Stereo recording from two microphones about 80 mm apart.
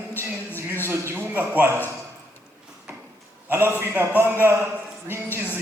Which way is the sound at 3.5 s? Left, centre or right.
Right.